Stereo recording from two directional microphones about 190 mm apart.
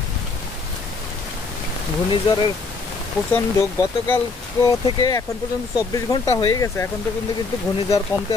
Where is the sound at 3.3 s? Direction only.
15° left (ahead or behind).